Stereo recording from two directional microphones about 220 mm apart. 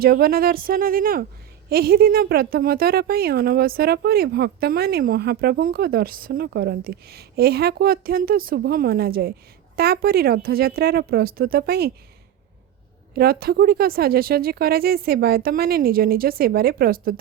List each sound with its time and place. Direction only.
0.0 s a woman's voice: 45° right (ahead or behind)
13.1 s a woman's voice: 45° right (ahead or behind)